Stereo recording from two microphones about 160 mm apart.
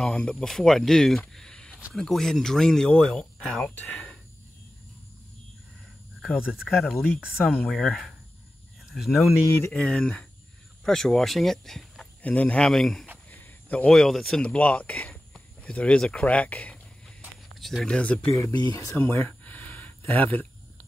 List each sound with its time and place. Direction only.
0.0 s speech: 5° left (ahead or behind)
6.2 s speech: 5° right (ahead or behind)
9.5 s speech: 10° left (ahead or behind)
17.2 s a sound: centre (ahead or behind)
18.3 s speech: 20° left (ahead or behind)